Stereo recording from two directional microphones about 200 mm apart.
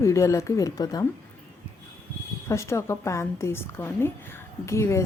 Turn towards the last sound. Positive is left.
turn(degrees=15)  # may be behind; listen again after turning